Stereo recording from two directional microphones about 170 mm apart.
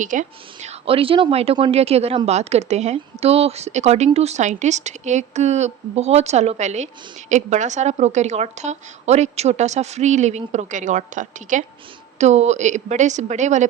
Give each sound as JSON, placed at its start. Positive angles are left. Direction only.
{"t": 0.0, "sound": "a woman's voice", "side_deg": -50}